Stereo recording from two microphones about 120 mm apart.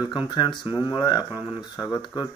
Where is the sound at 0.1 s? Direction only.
40° left (ahead or behind).